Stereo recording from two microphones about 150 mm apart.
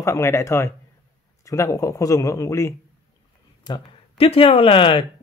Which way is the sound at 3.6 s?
30° left (ahead or behind).